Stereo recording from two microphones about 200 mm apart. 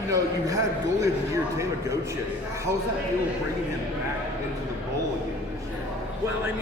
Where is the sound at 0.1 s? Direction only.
15° right (ahead or behind).